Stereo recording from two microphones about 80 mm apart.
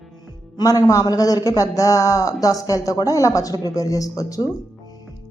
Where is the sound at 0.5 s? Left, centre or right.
Left.